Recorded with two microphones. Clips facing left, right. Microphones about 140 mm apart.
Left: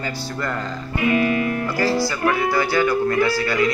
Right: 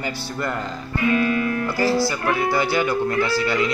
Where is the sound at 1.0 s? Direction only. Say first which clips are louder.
Left 1 dB; 20° left (ahead or behind).